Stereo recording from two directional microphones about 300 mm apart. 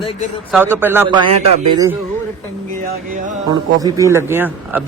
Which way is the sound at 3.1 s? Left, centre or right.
Right.